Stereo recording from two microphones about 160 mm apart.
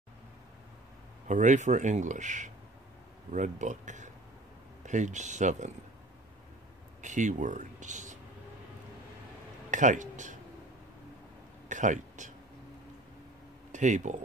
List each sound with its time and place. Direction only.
1.2 s speech: 50° right (ahead or behind)
7.0 s speech: 50° right (ahead or behind)
9.7 s speech: 50° right (ahead or behind)
11.7 s speech: 50° right (ahead or behind)
13.7 s speech: 50° right (ahead or behind)